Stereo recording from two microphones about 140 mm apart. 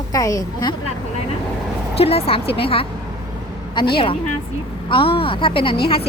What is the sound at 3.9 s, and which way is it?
A woman's voice, 40° left (ahead or behind).